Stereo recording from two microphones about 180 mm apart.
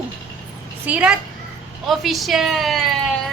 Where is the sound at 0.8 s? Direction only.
5° right (ahead or behind).